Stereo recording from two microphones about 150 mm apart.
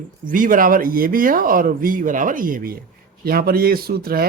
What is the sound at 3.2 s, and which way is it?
Speech, 85° right.